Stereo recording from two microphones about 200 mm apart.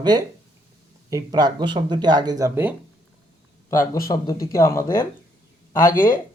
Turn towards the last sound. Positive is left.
turn(degrees=45)  # may be behind; listen again after turning